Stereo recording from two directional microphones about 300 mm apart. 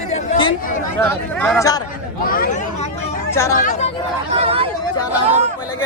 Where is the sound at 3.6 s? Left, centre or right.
Left.